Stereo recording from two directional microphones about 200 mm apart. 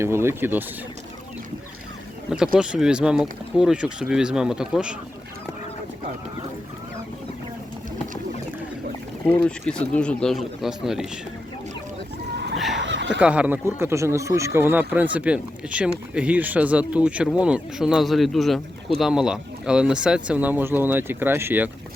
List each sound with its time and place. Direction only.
0.0 s speech: 10° right (ahead or behind)
2.6 s speech: 5° right (ahead or behind)
9.3 s speech: 5° left (ahead or behind)
12.7 s a sound: 65° right (ahead or behind)
13.1 s speech: 5° right (ahead or behind)